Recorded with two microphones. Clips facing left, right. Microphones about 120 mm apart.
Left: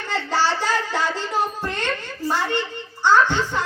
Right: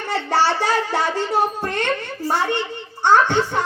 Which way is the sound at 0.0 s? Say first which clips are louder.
Right 3 dB; 60° right (ahead or behind).